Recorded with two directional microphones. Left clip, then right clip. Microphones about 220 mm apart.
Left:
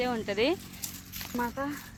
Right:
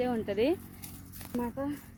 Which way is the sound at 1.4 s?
5° right (ahead or behind).